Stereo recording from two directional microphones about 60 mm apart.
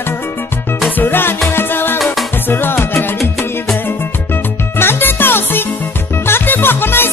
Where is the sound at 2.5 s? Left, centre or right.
Left.